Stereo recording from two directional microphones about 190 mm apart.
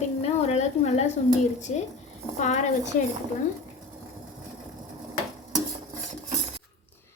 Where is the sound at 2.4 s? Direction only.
40° left (ahead or behind).